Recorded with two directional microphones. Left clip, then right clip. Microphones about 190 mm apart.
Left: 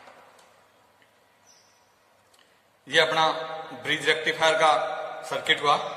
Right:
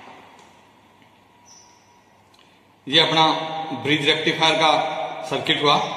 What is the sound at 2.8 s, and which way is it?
A man's voice, 50° left (ahead or behind).